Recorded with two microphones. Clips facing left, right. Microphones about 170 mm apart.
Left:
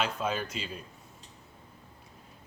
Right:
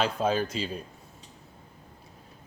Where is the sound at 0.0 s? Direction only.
30° right (ahead or behind).